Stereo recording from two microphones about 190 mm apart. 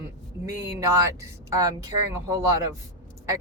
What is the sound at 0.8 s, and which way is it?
Speech, 15° right (ahead or behind).